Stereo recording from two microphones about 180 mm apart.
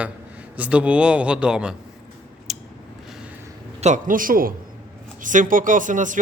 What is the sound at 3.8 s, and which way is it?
Speech, 45° right (ahead or behind).